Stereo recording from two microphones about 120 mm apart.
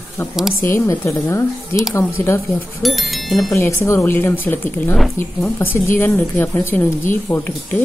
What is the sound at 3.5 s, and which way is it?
Speech, 25° left (ahead or behind).